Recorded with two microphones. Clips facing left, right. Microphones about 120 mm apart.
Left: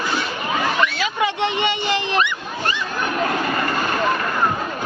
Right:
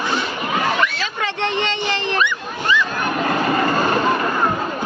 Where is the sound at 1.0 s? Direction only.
15° left (ahead or behind).